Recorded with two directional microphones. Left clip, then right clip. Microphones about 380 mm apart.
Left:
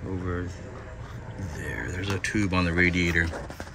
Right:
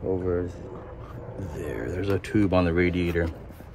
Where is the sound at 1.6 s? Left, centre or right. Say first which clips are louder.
Right 2 dB; centre.